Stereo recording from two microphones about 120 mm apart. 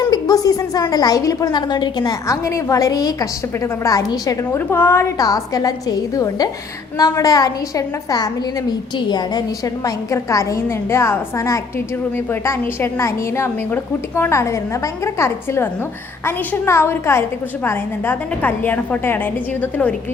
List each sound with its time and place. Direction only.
0.1 s a woman's voice: 30° left (ahead or behind)
9.8 s a woman's voice: 25° left (ahead or behind)